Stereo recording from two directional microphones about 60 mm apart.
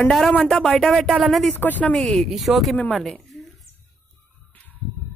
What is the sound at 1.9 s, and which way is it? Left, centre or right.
Speech, centre.